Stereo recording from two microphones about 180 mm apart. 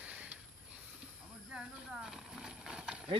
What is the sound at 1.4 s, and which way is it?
Clip-clop, 5° right (ahead or behind).